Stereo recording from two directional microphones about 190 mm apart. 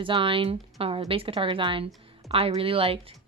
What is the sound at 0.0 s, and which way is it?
A woman's voice, 25° right (ahead or behind).